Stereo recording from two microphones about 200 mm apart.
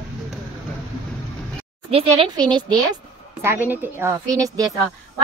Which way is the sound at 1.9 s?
25° right (ahead or behind).